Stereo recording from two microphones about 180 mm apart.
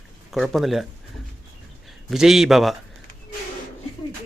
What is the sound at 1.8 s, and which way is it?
Speech, centre (ahead or behind).